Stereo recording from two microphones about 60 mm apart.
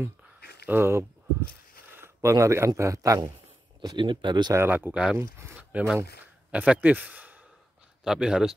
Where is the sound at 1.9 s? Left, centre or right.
Right.